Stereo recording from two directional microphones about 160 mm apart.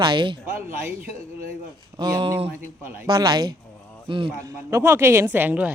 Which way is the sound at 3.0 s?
25° right (ahead or behind).